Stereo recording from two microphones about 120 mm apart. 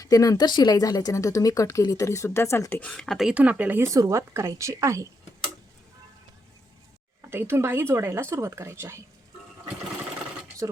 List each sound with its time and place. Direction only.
0.0 s speech: 30° left (ahead or behind)
2.9 s speech: 5° left (ahead or behind)
3.3 s speech: 10° right (ahead or behind)
7.2 s speech: 20° right (ahead or behind)
10.6 s speech: 30° right (ahead or behind)